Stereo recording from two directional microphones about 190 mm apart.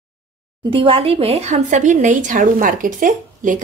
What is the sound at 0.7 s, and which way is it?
A woman's voice, 30° right (ahead or behind).